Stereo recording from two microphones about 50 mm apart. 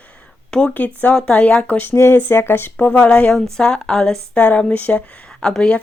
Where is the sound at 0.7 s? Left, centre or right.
Left.